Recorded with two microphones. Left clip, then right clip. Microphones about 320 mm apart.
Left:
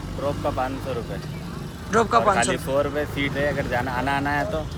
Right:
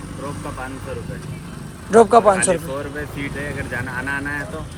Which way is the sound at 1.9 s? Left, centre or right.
Centre.